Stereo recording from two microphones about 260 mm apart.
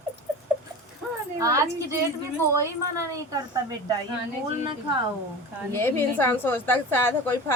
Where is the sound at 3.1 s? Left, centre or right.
Centre.